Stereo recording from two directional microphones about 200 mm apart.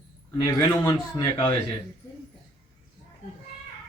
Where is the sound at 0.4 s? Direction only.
20° left (ahead or behind).